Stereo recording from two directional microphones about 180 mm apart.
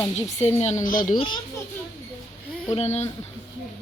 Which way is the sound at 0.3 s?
40° left (ahead or behind).